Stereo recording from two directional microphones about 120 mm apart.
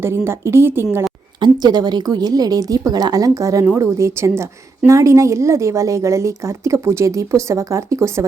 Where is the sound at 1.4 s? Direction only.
35° right (ahead or behind).